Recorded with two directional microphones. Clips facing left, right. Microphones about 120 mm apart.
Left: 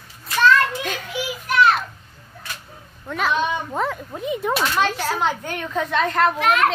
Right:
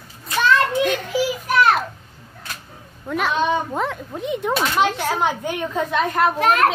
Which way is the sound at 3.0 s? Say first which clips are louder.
Right 2 dB; 5° right (ahead or behind).